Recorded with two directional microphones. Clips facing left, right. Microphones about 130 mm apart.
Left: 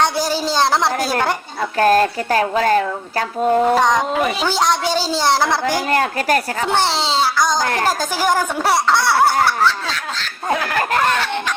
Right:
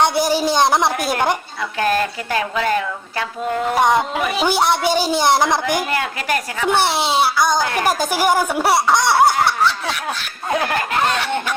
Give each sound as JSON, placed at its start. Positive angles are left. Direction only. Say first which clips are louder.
{"t": 0.0, "sound": "speech", "louder": "right 2 dB", "side_deg": -15}
{"t": 1.8, "sound": "speech", "louder": "left 5 dB", "side_deg": 40}
{"t": 3.8, "sound": "speech", "louder": "even", "side_deg": -10}
{"t": 5.9, "sound": "speech", "louder": "left 4 dB", "side_deg": 40}
{"t": 6.7, "sound": "speech", "louder": "right 3 dB", "side_deg": -15}